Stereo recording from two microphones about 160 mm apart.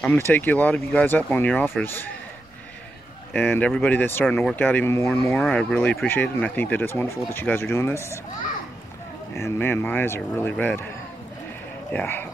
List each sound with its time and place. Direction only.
0.3 s speech: 10° left (ahead or behind)
3.3 s speech: 10° left (ahead or behind)
5.3 s speech: 5° left (ahead or behind)
9.3 s speech: 15° left (ahead or behind)
11.9 s speech: 10° left (ahead or behind)